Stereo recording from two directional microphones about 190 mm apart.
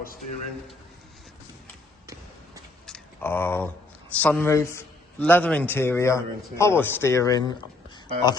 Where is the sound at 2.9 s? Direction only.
5° left (ahead or behind).